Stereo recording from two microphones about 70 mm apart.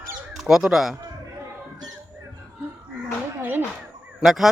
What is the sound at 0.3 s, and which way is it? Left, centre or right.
Speech, centre.